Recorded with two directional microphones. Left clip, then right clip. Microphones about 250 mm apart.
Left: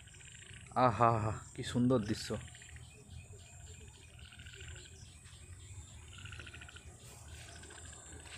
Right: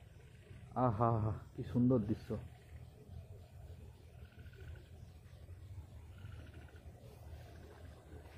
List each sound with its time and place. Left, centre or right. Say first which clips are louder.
0.7 s speech: left 6 dB; centre
1.9 s speech: left 3 dB; left